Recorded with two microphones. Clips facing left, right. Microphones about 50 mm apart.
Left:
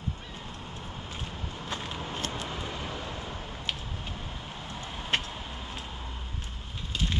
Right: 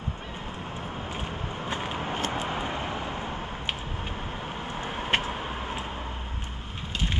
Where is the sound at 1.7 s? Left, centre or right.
Right.